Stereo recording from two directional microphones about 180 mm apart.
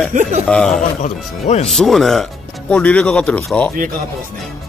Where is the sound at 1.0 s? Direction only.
40° left (ahead or behind).